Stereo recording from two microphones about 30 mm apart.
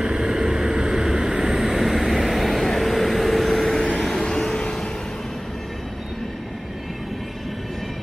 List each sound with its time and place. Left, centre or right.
0.0 s vehicle: right; by 4.3 s centre
4.3 s vehicle: left